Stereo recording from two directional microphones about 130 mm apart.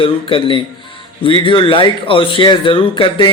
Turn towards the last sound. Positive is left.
turn(degrees=40)  # may be behind; listen again after turning